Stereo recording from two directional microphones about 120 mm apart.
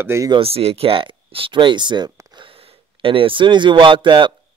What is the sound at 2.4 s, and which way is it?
Speech, 50° right (ahead or behind).